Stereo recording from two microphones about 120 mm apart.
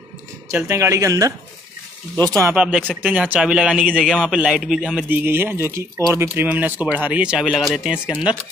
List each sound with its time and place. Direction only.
0.5 s speech: 25° right (ahead or behind)
2.5 s a man's voice: 10° right (ahead or behind)
5.1 s speech: 20° right (ahead or behind)